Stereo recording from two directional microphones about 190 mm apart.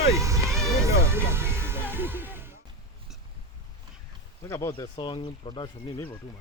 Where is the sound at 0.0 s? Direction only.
15° right (ahead or behind).